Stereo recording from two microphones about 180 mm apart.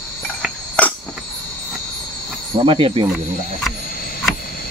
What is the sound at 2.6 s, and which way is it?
Cricket, 30° right (ahead or behind).